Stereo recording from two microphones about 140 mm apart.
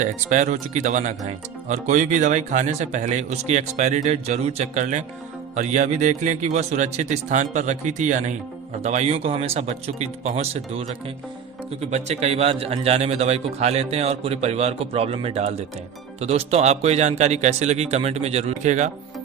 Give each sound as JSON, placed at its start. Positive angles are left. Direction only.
{"t": 0.0, "sound": "a man's voice", "side_deg": -60}
{"t": 11.9, "sound": "a man's voice", "side_deg": -50}